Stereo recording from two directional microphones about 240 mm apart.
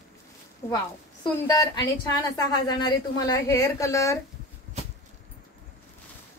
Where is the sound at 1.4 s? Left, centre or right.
Centre.